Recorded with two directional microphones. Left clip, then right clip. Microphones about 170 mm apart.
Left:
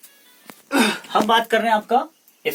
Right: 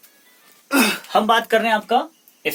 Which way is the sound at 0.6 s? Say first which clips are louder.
Right 1 dB; 35° right (ahead or behind).